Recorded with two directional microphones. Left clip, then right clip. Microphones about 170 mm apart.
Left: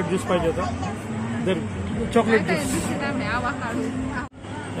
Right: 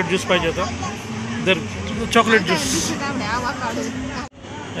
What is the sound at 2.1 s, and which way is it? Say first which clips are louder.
Speech: right 5 dB; 5° right (ahead or behind).